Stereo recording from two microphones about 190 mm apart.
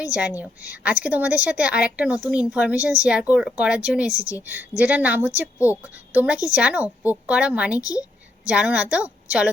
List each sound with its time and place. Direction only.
0.0 s a woman's voice: 5° right (ahead or behind)